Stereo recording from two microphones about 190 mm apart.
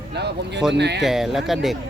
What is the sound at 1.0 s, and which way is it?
Speech, centre (ahead or behind).